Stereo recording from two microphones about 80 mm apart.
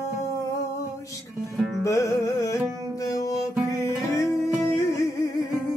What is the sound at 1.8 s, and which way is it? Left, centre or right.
Music, left.